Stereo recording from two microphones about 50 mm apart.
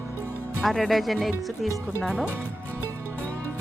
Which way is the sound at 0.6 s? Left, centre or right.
Centre.